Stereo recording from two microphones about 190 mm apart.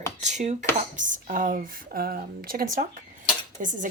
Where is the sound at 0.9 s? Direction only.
45° right (ahead or behind).